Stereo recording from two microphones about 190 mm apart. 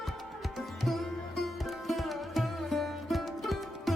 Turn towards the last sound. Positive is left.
turn(degrees=0)  # may be behind; listen again after turning